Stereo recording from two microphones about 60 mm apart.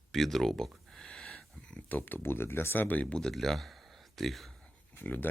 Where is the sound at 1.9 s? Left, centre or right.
Left.